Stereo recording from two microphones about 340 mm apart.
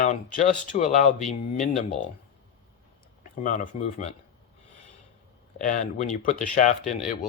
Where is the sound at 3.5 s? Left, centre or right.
Left.